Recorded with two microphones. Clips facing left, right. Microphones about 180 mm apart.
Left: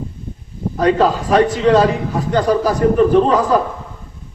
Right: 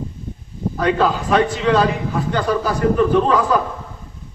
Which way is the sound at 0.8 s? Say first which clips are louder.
Left 4 dB; 35° left (ahead or behind).